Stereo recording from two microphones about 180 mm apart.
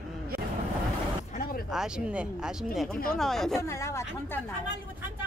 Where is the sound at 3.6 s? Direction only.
15° left (ahead or behind).